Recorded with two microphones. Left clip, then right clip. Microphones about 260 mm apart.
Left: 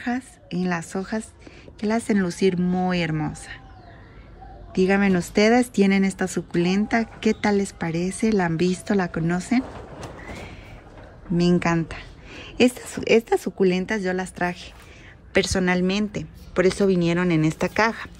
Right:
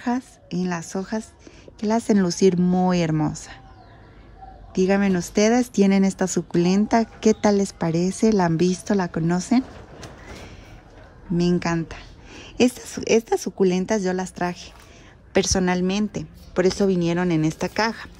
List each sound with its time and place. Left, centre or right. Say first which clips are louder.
0.0 s speech: right 2 dB; centre
4.7 s speech: even; centre
11.3 s speech: left 1 dB; centre